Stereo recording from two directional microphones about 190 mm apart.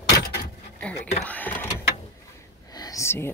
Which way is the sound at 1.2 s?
10° left (ahead or behind).